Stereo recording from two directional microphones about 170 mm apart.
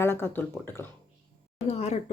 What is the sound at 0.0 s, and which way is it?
Speech, 15° left (ahead or behind).